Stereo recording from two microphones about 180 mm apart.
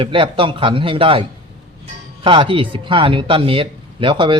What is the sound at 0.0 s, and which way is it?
Speech, 30° right (ahead or behind).